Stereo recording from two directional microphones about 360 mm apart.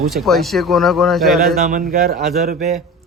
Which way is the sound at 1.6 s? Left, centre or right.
Right.